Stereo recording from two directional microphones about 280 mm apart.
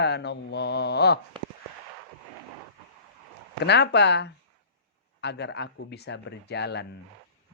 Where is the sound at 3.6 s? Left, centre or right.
Left.